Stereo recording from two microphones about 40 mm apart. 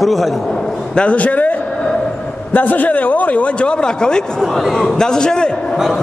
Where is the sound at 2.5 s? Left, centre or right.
Left; by 5.5 s centre.